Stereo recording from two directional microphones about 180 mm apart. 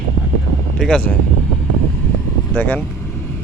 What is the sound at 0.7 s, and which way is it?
Speech, 5° left (ahead or behind).